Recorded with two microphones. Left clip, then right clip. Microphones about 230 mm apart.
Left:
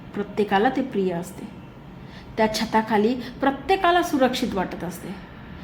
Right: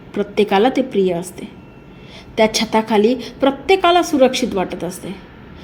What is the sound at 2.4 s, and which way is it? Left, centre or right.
A woman's voice, centre.